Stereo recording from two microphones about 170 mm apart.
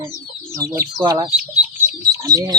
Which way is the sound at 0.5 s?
15° right (ahead or behind).